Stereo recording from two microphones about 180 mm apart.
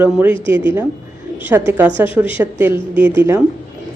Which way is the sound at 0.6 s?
15° right (ahead or behind).